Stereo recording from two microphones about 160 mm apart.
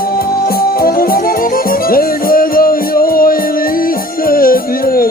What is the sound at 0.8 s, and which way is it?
Music, 65° left (ahead or behind).